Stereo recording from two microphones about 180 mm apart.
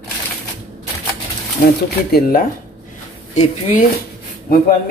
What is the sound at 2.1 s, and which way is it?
Speech, 55° left (ahead or behind).